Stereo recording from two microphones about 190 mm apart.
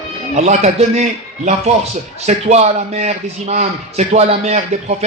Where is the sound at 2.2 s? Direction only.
35° right (ahead or behind).